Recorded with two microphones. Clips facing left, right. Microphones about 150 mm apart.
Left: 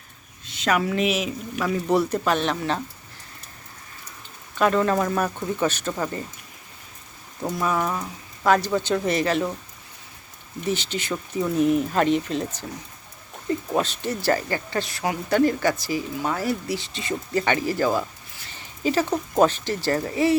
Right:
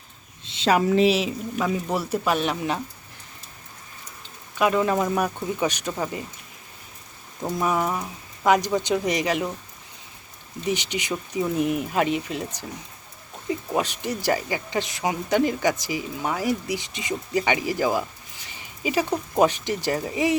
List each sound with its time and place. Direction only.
0.4 s a woman's voice: 30° right (ahead or behind)
1.6 s speech: 10° right (ahead or behind)
4.5 s speech: 10° right (ahead or behind)
7.6 s speech: 15° right (ahead or behind)
10.7 s speech: 15° right (ahead or behind)
18.4 s a sound: 10° right (ahead or behind)
19.4 s speech: 15° right (ahead or behind)